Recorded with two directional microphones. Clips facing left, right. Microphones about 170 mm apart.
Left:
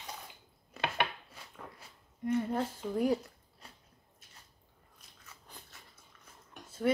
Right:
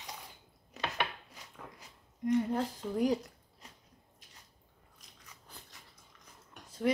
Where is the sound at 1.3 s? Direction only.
15° right (ahead or behind).